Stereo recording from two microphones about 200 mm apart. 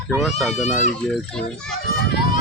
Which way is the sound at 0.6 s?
35° left (ahead or behind).